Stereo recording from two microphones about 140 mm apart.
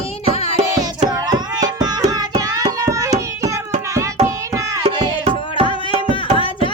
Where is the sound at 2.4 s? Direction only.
25° right (ahead or behind).